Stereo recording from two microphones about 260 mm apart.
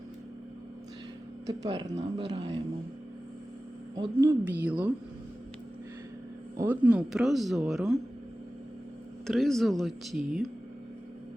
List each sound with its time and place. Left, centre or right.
1.5 s speech: centre
3.9 s a woman's voice: centre
6.6 s speech: centre
9.2 s speech: centre